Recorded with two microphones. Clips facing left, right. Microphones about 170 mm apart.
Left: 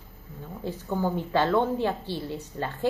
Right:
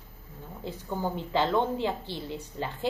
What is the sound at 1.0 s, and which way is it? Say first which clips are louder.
A woman's voice: left 3 dB; 15° right (ahead or behind).